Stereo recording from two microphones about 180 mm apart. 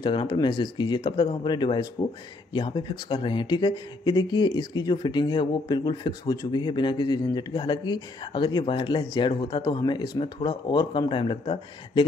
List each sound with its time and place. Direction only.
0.0 s speech: 25° left (ahead or behind)